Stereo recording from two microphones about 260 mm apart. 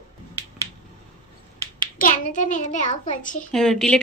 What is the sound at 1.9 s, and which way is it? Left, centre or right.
A child's voice, left.